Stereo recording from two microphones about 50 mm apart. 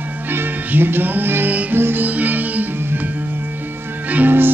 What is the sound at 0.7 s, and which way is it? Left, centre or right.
Music, right.